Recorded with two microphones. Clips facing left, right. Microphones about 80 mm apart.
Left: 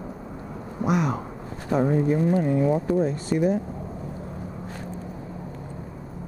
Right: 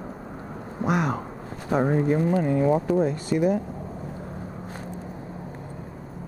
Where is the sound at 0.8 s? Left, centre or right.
Right.